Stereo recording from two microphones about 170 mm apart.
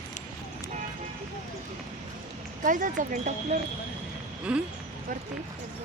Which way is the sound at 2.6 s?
50° right (ahead or behind).